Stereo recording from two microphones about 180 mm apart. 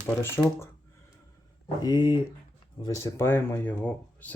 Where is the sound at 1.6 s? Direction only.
25° left (ahead or behind); by 4.3 s 10° left (ahead or behind).